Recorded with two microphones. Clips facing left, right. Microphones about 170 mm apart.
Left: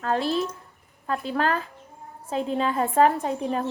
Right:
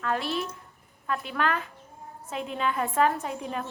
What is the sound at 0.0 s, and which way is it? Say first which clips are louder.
A woman's voice: left 5 dB; 35° left (ahead or behind).